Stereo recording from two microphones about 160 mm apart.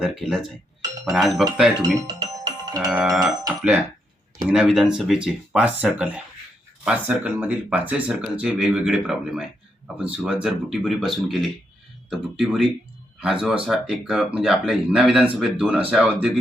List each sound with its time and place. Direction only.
0.0 s speech: centre (ahead or behind)
2.0 s music: 25° right (ahead or behind)
2.8 s speech: 5° right (ahead or behind)
4.5 s speech: 5° right (ahead or behind)